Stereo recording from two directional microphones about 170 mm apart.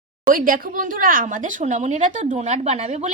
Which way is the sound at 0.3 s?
55° right (ahead or behind).